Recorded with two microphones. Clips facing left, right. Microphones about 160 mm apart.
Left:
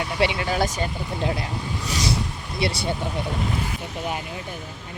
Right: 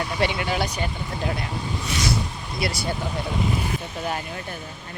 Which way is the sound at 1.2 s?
25° left (ahead or behind).